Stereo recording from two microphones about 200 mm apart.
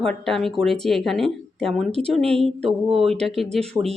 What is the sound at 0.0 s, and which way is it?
Speech, centre (ahead or behind).